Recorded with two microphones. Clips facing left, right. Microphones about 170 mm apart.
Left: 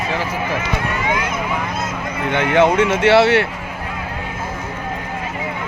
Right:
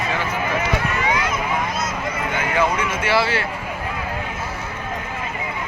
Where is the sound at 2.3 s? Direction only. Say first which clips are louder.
Left 8 dB; 70° left (ahead or behind).